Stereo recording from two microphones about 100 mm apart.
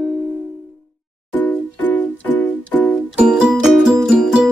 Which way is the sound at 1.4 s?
15° left (ahead or behind).